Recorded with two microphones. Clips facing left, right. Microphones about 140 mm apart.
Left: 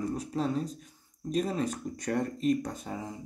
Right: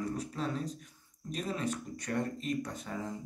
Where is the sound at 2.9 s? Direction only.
30° left (ahead or behind).